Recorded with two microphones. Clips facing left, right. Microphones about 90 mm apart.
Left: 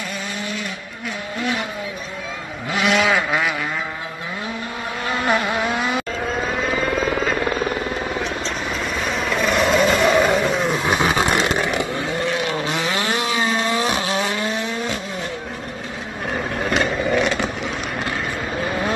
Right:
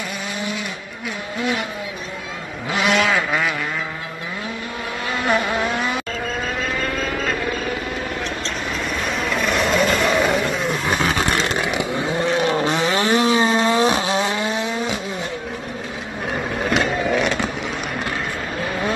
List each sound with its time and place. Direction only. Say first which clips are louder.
2.7 s vehicle: even; centre (ahead or behind)
5.2 s vehicle: right 1 dB; centre (ahead or behind)
9.0 s vehicle: left 1 dB; centre (ahead or behind)
12.2 s vehicle: right 5 dB; 35° right (ahead or behind)
16.5 s vehicle: right 1 dB; centre (ahead or behind)